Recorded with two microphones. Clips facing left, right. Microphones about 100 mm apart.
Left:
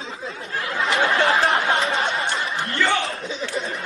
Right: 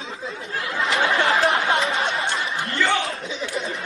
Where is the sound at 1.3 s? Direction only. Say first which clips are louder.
Even; centre (ahead or behind).